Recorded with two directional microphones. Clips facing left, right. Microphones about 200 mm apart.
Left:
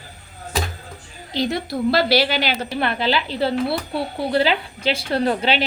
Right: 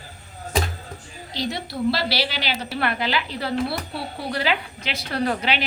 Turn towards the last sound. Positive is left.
turn(degrees=30)  # may be behind; listen again after turning